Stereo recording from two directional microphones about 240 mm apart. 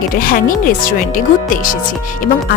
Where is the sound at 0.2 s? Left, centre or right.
Left.